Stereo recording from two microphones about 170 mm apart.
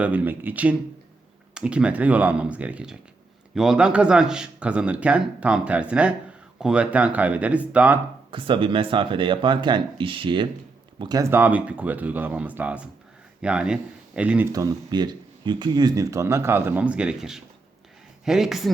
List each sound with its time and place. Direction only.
0.0 s speech: 10° right (ahead or behind)
8.3 s speech: 30° right (ahead or behind); by 14.4 s 5° right (ahead or behind)
14.5 s speech: 20° right (ahead or behind); by 18.7 s centre (ahead or behind)